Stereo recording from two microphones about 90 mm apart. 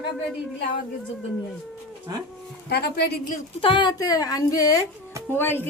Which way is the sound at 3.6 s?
65° left (ahead or behind).